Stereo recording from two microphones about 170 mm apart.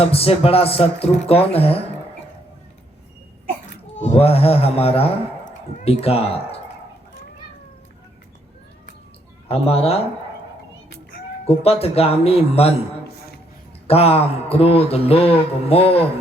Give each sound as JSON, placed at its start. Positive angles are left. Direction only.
{"t": 0.0, "sound": "speech", "side_deg": 35}
{"t": 3.9, "sound": "speech", "side_deg": 40}
{"t": 9.5, "sound": "speech", "side_deg": 35}
{"t": 11.4, "sound": "speech", "side_deg": 35}
{"t": 13.1, "sound": "a sound", "side_deg": 70}
{"t": 13.8, "sound": "speech", "side_deg": 35}